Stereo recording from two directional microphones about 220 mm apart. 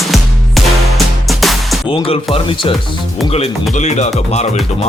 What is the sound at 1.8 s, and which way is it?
Speech, 25° left (ahead or behind).